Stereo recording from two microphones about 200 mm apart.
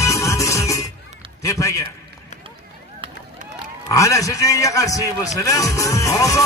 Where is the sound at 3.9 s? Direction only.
15° left (ahead or behind).